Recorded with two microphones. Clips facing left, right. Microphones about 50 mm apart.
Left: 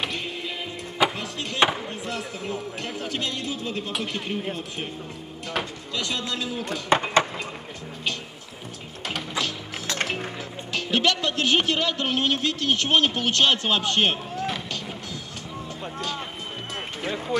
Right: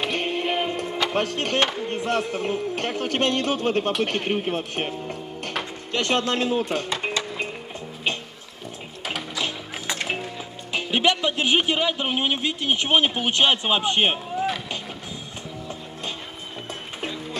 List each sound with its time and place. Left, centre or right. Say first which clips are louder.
0.1 s music: right 7 dB; right
1.1 s a man's voice: right 8 dB; right
6.9 s a sound: left 7 dB; left
10.7 s speech: right 2 dB; centre